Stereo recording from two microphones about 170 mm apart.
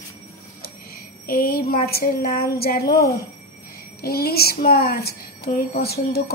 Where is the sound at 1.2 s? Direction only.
60° left (ahead or behind).